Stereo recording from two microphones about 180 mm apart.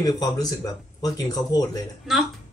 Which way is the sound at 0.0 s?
20° left (ahead or behind).